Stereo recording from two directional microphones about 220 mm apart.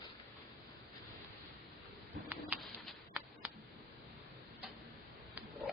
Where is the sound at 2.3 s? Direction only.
5° right (ahead or behind).